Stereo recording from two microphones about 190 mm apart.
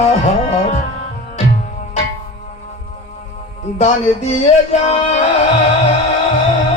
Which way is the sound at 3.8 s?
35° left (ahead or behind).